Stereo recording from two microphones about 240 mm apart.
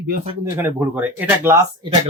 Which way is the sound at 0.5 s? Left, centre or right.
Centre.